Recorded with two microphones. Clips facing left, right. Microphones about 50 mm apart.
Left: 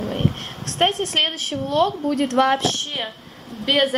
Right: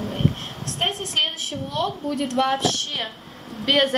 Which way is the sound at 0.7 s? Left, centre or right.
Left.